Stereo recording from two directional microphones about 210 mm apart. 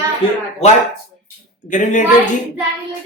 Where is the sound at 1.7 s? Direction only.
35° left (ahead or behind).